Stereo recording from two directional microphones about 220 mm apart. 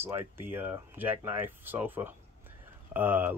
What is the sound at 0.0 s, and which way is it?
Speech, 10° right (ahead or behind).